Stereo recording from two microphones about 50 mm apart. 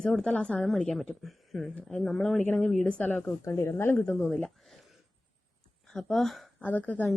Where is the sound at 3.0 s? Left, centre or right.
Left.